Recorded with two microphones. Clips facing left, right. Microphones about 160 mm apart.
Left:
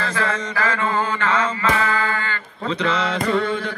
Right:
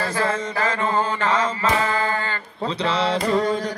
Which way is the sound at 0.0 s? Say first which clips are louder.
Right 1 dB; 35° right (ahead or behind).